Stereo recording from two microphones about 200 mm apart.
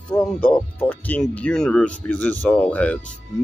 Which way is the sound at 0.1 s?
5° left (ahead or behind).